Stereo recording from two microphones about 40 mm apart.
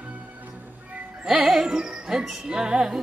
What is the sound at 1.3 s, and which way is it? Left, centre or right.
Music, centre.